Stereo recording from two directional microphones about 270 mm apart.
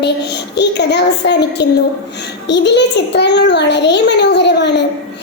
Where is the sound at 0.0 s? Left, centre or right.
Left.